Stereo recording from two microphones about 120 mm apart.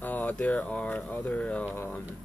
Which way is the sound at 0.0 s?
15° left (ahead or behind).